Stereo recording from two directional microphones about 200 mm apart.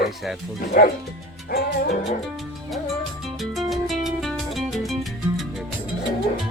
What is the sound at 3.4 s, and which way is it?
Music, centre (ahead or behind).